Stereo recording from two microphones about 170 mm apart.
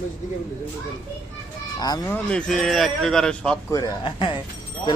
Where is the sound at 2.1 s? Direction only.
5° left (ahead or behind).